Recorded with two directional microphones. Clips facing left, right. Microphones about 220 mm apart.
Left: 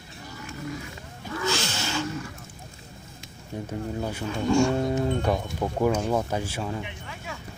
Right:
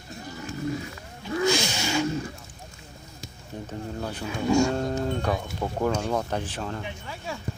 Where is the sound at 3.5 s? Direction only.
10° left (ahead or behind).